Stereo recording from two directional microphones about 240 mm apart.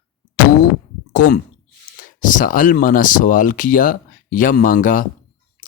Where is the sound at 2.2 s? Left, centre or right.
Left.